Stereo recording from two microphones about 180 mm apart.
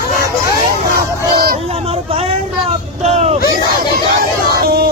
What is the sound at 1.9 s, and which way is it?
Vehicle, 35° right (ahead or behind).